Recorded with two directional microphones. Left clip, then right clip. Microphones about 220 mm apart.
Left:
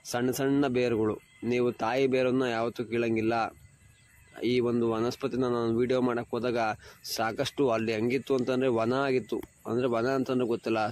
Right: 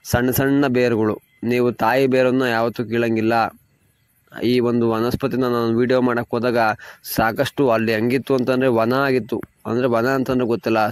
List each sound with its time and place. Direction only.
0.0 s speech: 40° right (ahead or behind)